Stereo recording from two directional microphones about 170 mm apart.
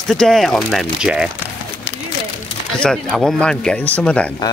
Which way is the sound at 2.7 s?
5° left (ahead or behind).